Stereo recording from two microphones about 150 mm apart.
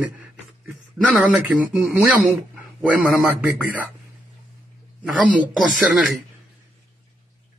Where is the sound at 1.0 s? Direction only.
5° right (ahead or behind).